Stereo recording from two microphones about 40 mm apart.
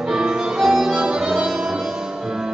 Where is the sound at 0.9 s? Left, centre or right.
Right.